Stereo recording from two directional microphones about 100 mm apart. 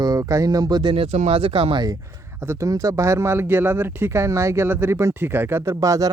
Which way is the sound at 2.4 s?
30° right (ahead or behind).